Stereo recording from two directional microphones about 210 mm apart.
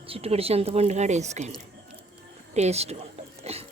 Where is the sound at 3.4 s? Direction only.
30° right (ahead or behind).